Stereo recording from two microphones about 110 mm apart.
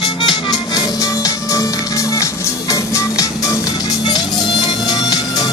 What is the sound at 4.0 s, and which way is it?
Music, 40° left (ahead or behind).